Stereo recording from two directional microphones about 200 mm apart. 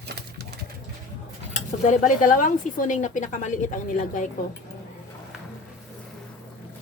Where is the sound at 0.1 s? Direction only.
55° right (ahead or behind).